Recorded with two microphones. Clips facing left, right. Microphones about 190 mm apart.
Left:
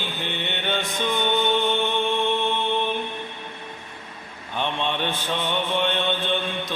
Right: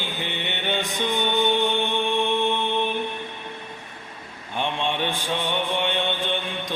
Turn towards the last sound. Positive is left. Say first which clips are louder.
# left 2 dB
turn(degrees=-15)  # may be behind; listen again after turning